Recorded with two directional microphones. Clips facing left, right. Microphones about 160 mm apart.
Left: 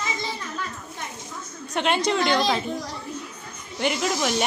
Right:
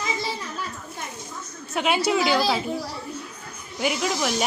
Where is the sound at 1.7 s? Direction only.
5° right (ahead or behind).